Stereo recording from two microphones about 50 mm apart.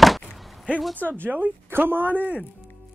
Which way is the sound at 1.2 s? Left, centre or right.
Right.